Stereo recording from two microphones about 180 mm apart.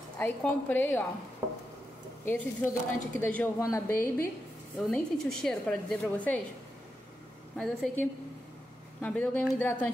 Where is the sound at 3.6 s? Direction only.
20° left (ahead or behind).